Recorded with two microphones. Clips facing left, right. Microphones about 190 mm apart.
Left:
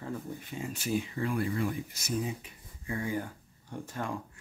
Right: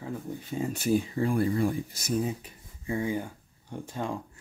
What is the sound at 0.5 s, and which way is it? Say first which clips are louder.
Speech: right 6 dB; 40° right (ahead or behind).